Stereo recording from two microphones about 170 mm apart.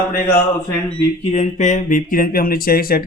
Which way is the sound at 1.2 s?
40° left (ahead or behind).